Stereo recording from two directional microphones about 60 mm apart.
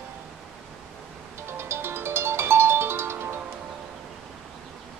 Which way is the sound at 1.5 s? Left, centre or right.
Right.